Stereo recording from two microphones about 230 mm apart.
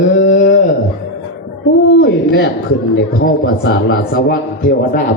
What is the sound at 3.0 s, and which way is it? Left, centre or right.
A man's voice, left.